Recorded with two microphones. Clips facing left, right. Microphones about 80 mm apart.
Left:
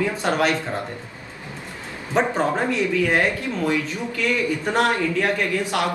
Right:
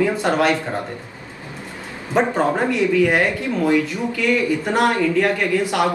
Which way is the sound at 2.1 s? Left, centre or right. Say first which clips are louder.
Right 3 dB; centre.